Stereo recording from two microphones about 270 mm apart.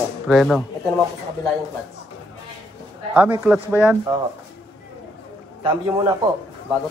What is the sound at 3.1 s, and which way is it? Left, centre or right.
Speech, centre.